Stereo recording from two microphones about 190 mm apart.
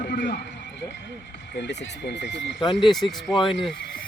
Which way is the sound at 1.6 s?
65° left (ahead or behind).